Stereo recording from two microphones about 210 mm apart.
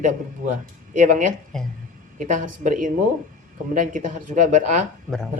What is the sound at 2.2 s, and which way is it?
Speech, 40° right (ahead or behind).